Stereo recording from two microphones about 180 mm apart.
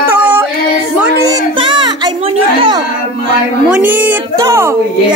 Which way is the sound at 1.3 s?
25° right (ahead or behind).